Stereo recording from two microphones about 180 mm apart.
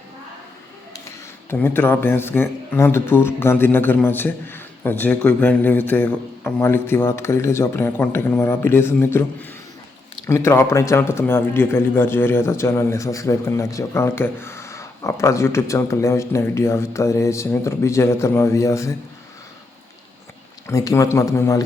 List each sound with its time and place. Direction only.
1.5 s speech: 10° left (ahead or behind)
20.7 s speech: 15° left (ahead or behind)